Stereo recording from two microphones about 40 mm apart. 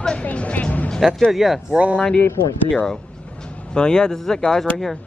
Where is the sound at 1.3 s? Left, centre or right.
Centre.